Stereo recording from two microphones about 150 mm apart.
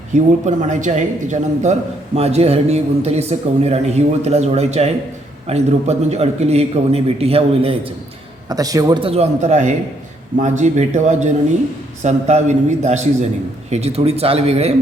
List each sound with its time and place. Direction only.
0.4 s a man's voice: 55° right (ahead or behind)
8.4 s a man's voice: 25° right (ahead or behind)
9.0 s a man's voice: 40° right (ahead or behind)